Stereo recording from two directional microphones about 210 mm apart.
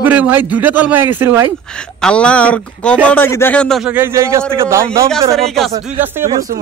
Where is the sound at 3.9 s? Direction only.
10° right (ahead or behind).